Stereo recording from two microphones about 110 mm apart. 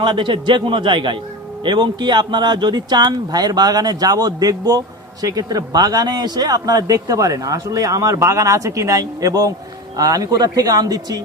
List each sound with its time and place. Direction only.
0.0 s a man's voice: 45° right (ahead or behind)